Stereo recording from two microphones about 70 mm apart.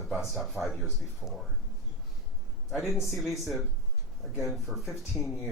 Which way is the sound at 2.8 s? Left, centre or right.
Left.